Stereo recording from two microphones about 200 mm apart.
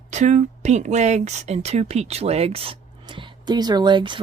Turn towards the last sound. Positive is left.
turn(degrees=-25)  # may be behind; listen again after turning